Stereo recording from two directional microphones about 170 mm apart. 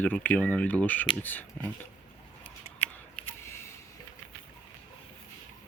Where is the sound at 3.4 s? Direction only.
15° left (ahead or behind).